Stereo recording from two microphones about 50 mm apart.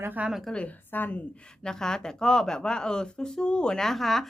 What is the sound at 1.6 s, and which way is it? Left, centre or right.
A woman's voice, centre.